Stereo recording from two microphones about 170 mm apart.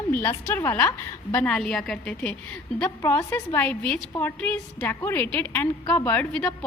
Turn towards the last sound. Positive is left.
turn(degrees=5)  # may be behind; listen again after turning